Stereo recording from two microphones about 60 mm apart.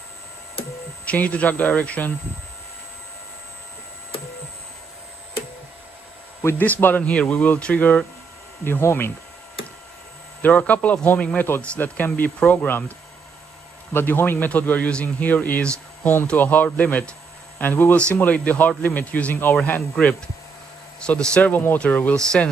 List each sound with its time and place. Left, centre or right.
1.0 s speech: left
6.6 s a man's voice: left
7.0 s speech: left
8.6 s a man's voice: left
10.4 s a man's voice: left
13.9 s a man's voice: left
21.0 s speech: centre
21.4 s a man's voice: left
22.1 s speech: centre